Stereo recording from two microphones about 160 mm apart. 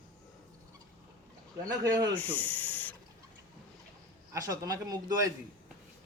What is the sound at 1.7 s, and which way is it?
Speech, 25° right (ahead or behind).